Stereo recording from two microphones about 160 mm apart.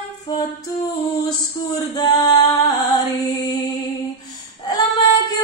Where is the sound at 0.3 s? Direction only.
25° left (ahead or behind).